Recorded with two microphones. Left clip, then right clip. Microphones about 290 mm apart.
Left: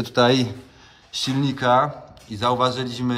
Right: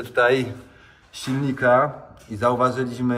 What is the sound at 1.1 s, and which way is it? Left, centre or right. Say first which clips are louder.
A man's voice: left 3 dB; centre.